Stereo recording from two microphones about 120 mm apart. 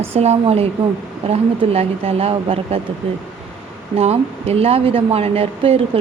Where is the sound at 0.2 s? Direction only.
60° right (ahead or behind).